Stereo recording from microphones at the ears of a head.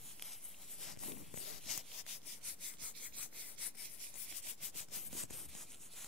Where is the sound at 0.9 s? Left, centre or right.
Left.